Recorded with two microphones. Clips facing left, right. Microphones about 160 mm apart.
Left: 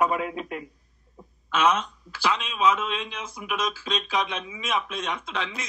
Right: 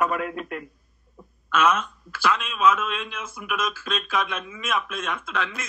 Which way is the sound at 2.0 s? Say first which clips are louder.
Right 3 dB; 50° right (ahead or behind).